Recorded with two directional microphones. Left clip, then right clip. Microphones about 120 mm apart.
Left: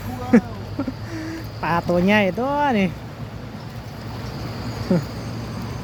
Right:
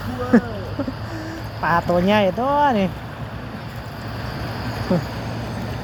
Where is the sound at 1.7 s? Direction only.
45° left (ahead or behind).